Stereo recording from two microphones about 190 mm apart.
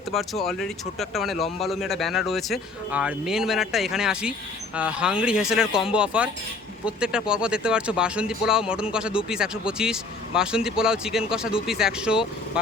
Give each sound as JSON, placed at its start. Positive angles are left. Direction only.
{"t": 0.1, "sound": "speech", "side_deg": 0}